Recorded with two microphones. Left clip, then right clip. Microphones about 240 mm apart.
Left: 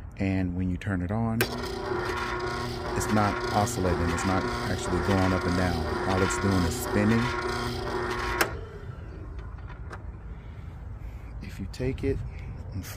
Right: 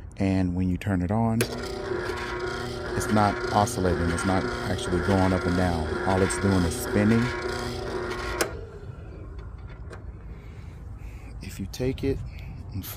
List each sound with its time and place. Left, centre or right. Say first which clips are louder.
0.2 s speech: right 3 dB; right
1.4 s rub: even; centre
3.7 s speech: right 2 dB; centre
7.1 s printer: right 1 dB; centre
11.4 s speech: right 3 dB; right